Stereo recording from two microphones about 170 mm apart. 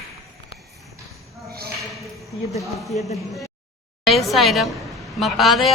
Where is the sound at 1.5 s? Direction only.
65° right (ahead or behind).